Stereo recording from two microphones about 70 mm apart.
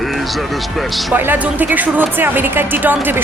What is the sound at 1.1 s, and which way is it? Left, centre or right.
A woman's voice, right.